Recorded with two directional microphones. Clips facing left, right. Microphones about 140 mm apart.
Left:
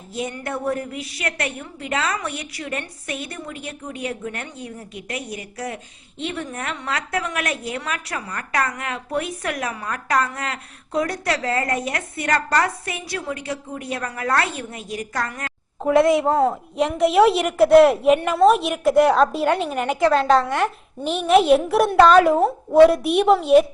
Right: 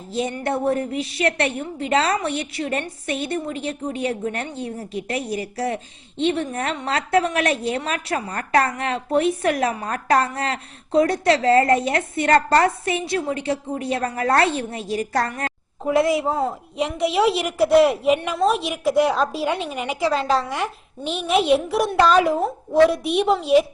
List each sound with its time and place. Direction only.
0.1 s a woman's voice: 25° right (ahead or behind)
16.0 s a woman's voice: centre (ahead or behind)